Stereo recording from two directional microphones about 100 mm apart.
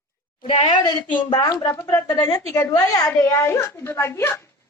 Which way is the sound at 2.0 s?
40° left (ahead or behind).